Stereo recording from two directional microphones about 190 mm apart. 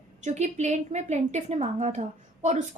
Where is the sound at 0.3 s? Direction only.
35° right (ahead or behind).